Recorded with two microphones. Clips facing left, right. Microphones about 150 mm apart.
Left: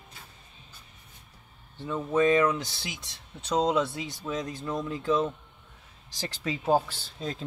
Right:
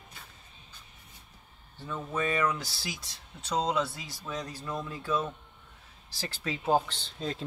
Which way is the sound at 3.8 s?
20° left (ahead or behind).